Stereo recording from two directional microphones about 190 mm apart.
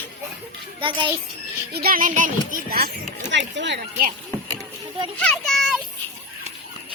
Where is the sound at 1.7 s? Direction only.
50° right (ahead or behind); by 3.8 s 70° right (ahead or behind).